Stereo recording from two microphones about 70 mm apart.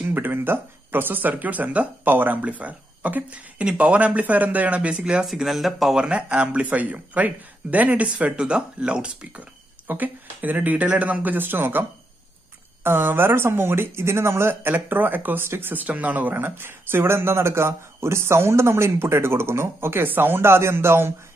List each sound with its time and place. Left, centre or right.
0.0 s speech: right
5.2 s speech: centre
5.9 s speech: centre
9.8 s speech: right
12.8 s speech: right